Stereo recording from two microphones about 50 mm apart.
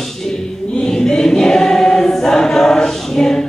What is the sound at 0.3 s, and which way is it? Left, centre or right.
Choir, centre.